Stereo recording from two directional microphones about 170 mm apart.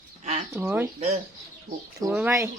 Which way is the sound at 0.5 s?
15° right (ahead or behind).